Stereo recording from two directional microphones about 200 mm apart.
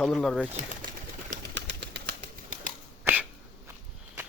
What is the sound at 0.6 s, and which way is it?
Speech, 40° right (ahead or behind).